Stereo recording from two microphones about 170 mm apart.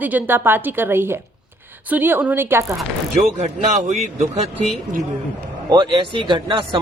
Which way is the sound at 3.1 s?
45° right (ahead or behind).